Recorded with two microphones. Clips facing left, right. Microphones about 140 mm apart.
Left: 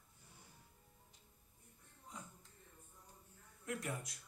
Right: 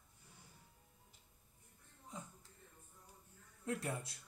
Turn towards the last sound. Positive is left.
turn(degrees=-30)  # may be behind; listen again after turning